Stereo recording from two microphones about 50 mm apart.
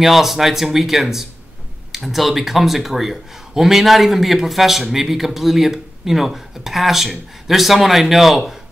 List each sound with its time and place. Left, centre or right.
0.0 s speech: centre